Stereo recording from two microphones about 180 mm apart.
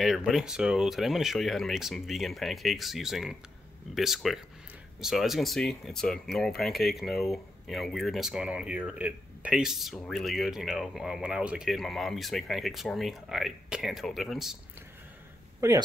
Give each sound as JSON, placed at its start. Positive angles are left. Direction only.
{"t": 0.0, "sound": "speech", "side_deg": 0}
{"t": 15.6, "sound": "speech", "side_deg": -20}